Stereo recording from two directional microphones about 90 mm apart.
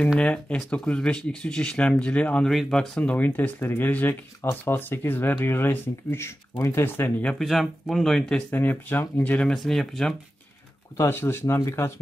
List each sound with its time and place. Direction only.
0.2 s speech: 10° left (ahead or behind)
2.5 s speech: 5° left (ahead or behind)
3.0 s speech: 15° left (ahead or behind)
7.4 s speech: centre (ahead or behind)
8.5 s speech: 20° left (ahead or behind)
9.5 s speech: centre (ahead or behind)
11.0 s speech: 25° left (ahead or behind)